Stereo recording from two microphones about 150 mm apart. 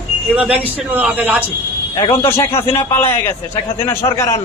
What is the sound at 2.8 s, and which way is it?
A man's voice, 15° left (ahead or behind).